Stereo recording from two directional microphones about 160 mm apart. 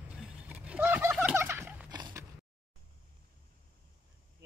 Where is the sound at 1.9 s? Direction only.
25° right (ahead or behind).